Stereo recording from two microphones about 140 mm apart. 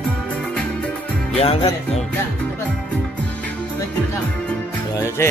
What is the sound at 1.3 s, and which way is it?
Music, 45° left (ahead or behind).